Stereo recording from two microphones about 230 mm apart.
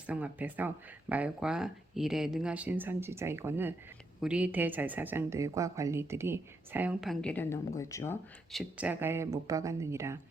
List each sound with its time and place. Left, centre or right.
0.1 s speech: centre
8.8 s speech: centre